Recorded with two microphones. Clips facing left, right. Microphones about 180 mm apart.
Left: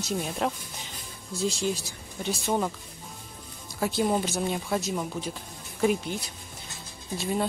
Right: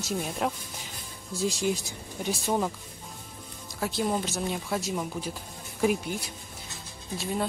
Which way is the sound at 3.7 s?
Centre (ahead or behind).